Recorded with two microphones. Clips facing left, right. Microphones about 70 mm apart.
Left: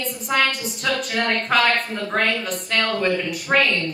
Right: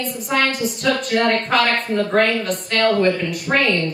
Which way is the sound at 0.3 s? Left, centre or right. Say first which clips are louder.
Right 1 dB; centre.